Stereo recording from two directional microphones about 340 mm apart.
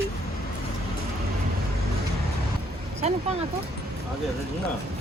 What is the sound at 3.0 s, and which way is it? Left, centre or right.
Speech, centre.